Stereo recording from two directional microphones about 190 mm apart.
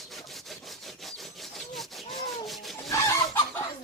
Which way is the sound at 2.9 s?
15° left (ahead or behind).